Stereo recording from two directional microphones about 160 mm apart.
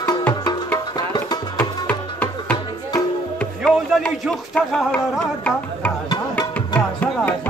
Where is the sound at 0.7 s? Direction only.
25° left (ahead or behind).